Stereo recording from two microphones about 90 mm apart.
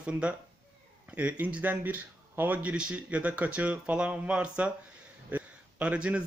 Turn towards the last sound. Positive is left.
turn(degrees=-15)  # may be behind; listen again after turning